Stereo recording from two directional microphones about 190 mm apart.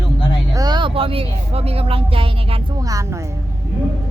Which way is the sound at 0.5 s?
20° right (ahead or behind).